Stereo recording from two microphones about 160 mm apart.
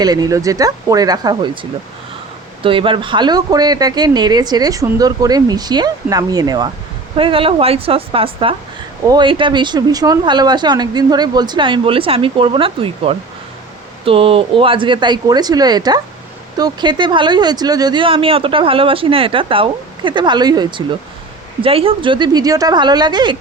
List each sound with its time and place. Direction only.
0.0 s speech: 25° right (ahead or behind)
2.6 s speech: 35° right (ahead or behind)
7.2 s speech: 35° right (ahead or behind)